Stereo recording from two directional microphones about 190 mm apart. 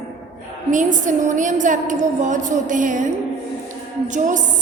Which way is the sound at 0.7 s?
40° right (ahead or behind).